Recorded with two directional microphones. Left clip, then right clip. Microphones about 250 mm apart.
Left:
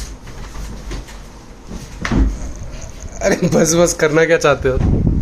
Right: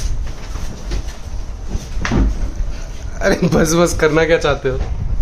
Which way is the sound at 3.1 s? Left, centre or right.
Centre.